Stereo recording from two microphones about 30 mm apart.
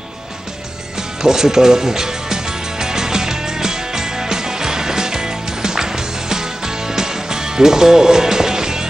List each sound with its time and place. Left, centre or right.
1.2 s music: centre